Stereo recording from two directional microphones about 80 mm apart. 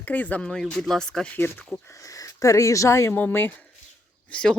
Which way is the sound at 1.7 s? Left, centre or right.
Centre.